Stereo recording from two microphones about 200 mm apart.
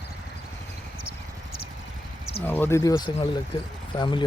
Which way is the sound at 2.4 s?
10° left (ahead or behind).